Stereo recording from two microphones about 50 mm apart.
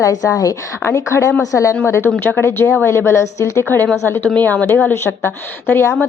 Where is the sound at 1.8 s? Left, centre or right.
Left.